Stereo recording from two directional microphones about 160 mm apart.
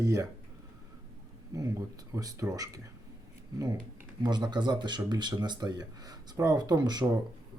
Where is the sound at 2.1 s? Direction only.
20° right (ahead or behind).